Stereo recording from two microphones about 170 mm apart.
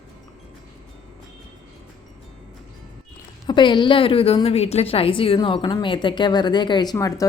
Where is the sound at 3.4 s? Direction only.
30° left (ahead or behind).